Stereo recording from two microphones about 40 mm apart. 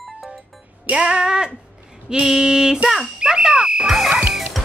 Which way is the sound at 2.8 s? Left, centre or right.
Centre.